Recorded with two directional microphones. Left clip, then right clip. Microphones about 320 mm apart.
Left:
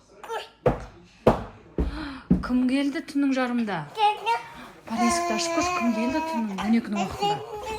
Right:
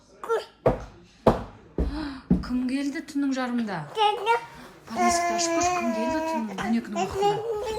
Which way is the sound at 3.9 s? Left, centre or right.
Centre.